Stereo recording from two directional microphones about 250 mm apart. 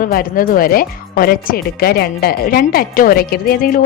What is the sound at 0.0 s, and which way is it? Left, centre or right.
A woman's voice, left.